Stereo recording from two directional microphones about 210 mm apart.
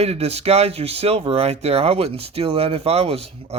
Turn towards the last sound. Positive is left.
turn(degrees=-30)  # may be behind; listen again after turning